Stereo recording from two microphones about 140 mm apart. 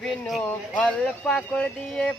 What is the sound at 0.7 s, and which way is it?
Speech, 5° left (ahead or behind).